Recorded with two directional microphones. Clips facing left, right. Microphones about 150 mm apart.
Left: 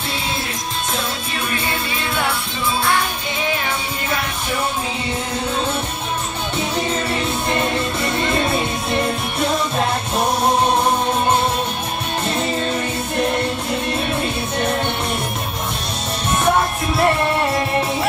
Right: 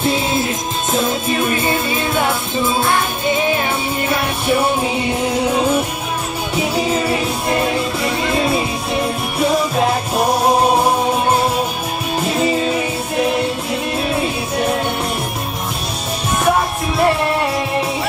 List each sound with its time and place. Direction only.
6.5 s music: 5° right (ahead or behind)
12.2 s music: 5° right (ahead or behind)
17.0 s music: centre (ahead or behind)